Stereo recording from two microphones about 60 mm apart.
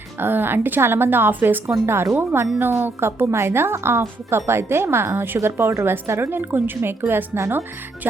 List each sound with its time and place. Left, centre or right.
0.2 s a woman's voice: right
2.1 s a woman's voice: right